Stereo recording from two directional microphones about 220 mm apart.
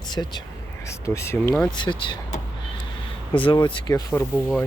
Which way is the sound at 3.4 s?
20° left (ahead or behind).